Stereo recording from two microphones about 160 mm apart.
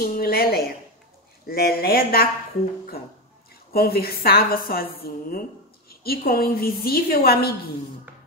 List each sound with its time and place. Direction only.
0.0 s a sound: 65° left (ahead or behind)
1.4 s a woman's voice: 70° left (ahead or behind)
3.7 s a woman's voice: 70° left (ahead or behind)